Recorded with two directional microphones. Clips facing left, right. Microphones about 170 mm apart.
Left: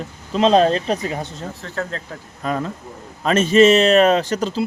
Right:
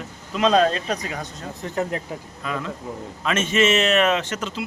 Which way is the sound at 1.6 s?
15° right (ahead or behind).